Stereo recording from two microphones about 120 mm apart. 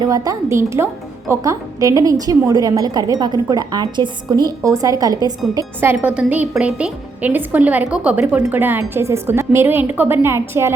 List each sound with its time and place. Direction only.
0.0 s a woman's voice: 30° right (ahead or behind)
5.8 s a woman's voice: 15° right (ahead or behind)